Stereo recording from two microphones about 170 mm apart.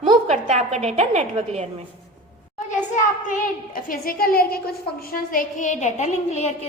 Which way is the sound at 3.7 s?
55° left (ahead or behind).